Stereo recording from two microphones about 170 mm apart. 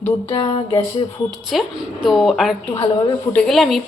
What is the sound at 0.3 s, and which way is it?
Music, 30° left (ahead or behind).